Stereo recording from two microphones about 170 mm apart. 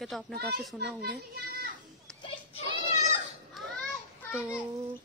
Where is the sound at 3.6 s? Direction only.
Centre (ahead or behind).